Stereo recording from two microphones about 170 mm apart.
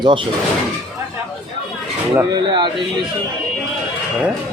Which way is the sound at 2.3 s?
25° right (ahead or behind).